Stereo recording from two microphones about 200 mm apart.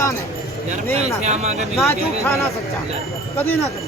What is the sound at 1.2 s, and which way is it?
Speech, 35° right (ahead or behind).